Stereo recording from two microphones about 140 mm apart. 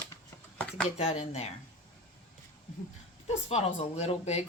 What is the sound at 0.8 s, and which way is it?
Speech, 50° left (ahead or behind).